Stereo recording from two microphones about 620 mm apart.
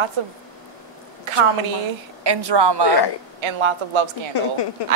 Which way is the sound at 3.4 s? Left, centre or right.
Right.